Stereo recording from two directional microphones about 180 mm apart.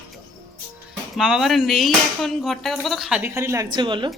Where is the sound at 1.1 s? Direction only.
Centre (ahead or behind).